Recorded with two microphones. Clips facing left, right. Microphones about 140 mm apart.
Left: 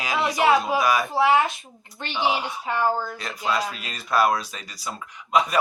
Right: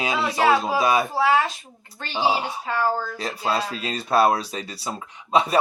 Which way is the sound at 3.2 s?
30° right (ahead or behind).